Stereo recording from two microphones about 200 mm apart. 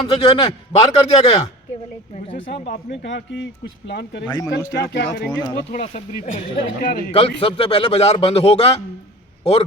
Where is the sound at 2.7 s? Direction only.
60° left (ahead or behind).